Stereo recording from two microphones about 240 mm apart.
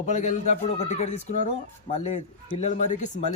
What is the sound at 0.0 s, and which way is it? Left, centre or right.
A man's voice, left.